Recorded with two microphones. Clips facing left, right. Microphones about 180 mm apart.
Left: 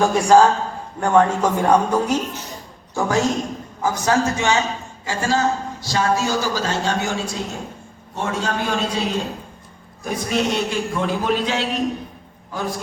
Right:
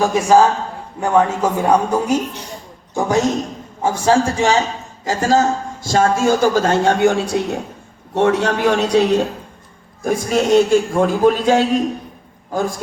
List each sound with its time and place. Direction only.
0.0 s a man's voice: 5° right (ahead or behind)
3.8 s a man's voice: 25° right (ahead or behind); by 9.1 s 70° right (ahead or behind)
10.0 s a man's voice: 45° right (ahead or behind)